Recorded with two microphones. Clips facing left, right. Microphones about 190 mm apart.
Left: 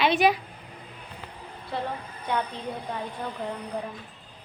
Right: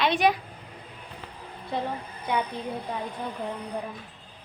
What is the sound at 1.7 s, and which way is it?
Speech, 20° right (ahead or behind).